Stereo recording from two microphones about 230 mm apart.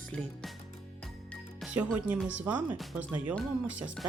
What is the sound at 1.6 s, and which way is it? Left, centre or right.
Music, centre.